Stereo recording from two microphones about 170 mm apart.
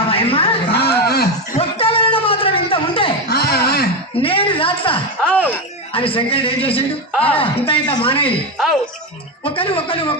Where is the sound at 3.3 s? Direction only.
65° left (ahead or behind).